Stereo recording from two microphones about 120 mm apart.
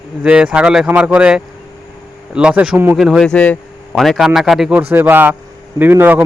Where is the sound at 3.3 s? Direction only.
10° left (ahead or behind).